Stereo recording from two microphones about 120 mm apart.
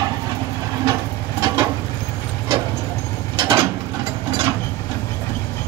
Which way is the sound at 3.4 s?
25° right (ahead or behind).